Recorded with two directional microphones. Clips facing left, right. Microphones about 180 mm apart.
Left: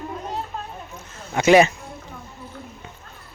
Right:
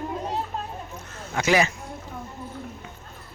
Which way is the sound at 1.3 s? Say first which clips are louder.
Left 7 dB; 25° left (ahead or behind).